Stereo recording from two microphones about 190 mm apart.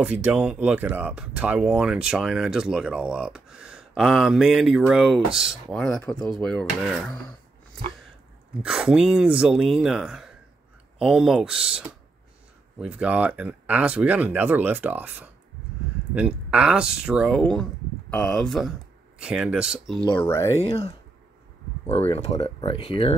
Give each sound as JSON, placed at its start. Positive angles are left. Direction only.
{"t": 0.0, "sound": "speech", "side_deg": -5}
{"t": 8.6, "sound": "speech", "side_deg": -5}
{"t": 20.1, "sound": "speech", "side_deg": 10}
{"t": 20.6, "sound": "speech", "side_deg": 30}